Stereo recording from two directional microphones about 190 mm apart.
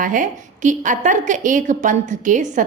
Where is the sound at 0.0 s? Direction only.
40° right (ahead or behind).